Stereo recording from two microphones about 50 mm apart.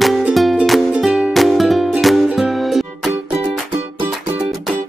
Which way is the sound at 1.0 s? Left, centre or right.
Centre.